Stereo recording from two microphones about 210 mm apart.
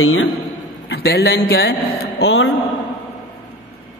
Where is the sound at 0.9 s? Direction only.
50° left (ahead or behind).